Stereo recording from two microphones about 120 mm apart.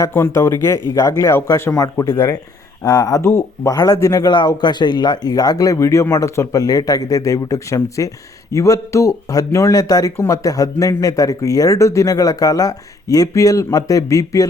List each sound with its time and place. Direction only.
0.1 s a man's voice: 20° left (ahead or behind)